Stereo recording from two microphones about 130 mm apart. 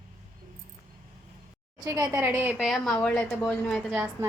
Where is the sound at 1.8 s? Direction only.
25° right (ahead or behind).